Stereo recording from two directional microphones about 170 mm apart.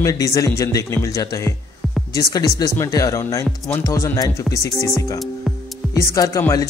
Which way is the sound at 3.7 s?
15° left (ahead or behind).